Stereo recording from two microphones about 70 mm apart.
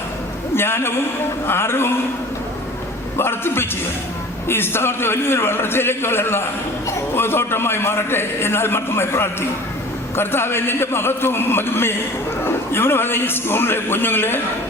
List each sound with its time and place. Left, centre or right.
0.5 s a man's voice: left
3.2 s a man's voice: left